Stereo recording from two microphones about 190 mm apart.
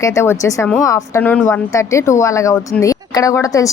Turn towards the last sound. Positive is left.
turn(degrees=15)  # may be behind; listen again after turning